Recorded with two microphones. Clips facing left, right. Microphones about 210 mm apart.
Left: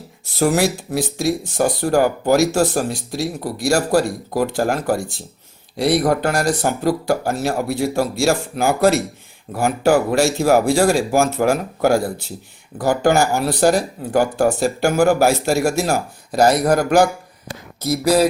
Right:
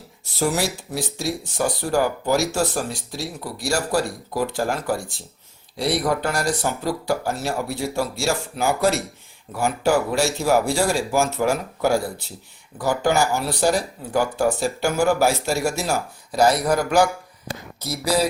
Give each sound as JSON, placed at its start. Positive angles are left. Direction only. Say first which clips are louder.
{"t": 0.3, "sound": "speech", "louder": "left 6 dB", "side_deg": 50}
{"t": 8.1, "sound": "speech", "louder": "left 6 dB", "side_deg": 90}
{"t": 8.5, "sound": "speech", "louder": "left 3 dB", "side_deg": 50}